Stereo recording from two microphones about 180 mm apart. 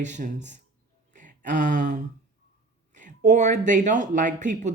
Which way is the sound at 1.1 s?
45° right (ahead or behind).